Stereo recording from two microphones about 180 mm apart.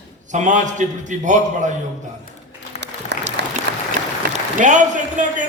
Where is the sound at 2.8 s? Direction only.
70° right (ahead or behind).